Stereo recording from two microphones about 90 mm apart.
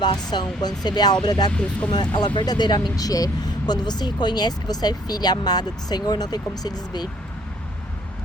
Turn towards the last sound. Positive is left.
turn(degrees=45)  # may be behind; listen again after turning